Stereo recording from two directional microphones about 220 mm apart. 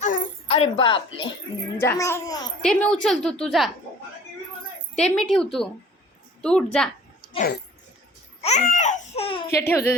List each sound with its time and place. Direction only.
0.0 s a sound: 35° left (ahead or behind)
1.8 s a child's voice: 10° left (ahead or behind)
2.6 s a woman's voice: 5° left (ahead or behind)
4.9 s a woman's voice: 5° left (ahead or behind)
7.3 s speech: 40° left (ahead or behind)
8.4 s babbling: 30° left (ahead or behind)
9.1 s speech: 25° left (ahead or behind)
9.5 s a child's voice: 10° left (ahead or behind)